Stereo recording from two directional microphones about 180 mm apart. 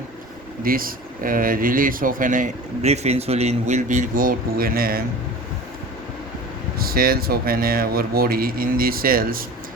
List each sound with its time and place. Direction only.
0.6 s speech: 55° right (ahead or behind)
6.7 s speech: 55° right (ahead or behind)